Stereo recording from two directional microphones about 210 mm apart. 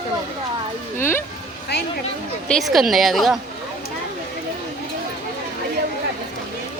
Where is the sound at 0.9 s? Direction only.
10° left (ahead or behind).